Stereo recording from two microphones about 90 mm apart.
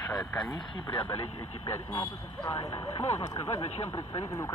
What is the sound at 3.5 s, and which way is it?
Speech, 30° left (ahead or behind).